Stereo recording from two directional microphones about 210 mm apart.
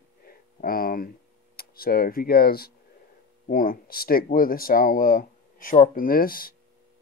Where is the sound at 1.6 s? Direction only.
45° left (ahead or behind).